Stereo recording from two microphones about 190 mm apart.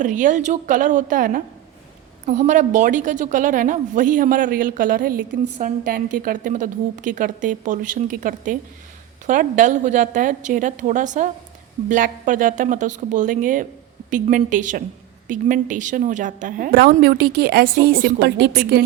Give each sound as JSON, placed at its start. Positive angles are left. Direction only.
{"t": 0.0, "sound": "a woman's voice", "side_deg": -40}